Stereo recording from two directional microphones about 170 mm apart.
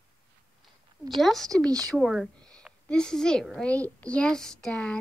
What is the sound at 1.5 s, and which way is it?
Speech, 20° right (ahead or behind).